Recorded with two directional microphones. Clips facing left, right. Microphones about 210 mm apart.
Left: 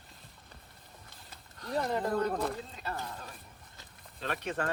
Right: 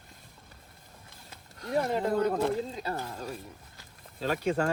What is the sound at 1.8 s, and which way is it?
Speech, 25° right (ahead or behind).